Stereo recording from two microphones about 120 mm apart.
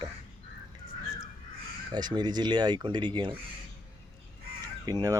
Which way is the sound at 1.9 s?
35° right (ahead or behind).